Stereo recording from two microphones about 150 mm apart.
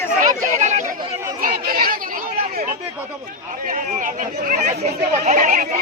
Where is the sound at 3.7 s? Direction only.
60° right (ahead or behind).